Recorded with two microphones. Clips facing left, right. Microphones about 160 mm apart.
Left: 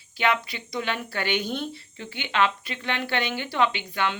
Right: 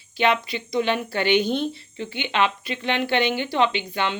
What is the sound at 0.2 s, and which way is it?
Speech, 25° right (ahead or behind).